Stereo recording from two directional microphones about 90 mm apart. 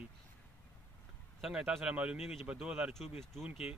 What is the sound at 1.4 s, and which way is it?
Speech, 5° right (ahead or behind).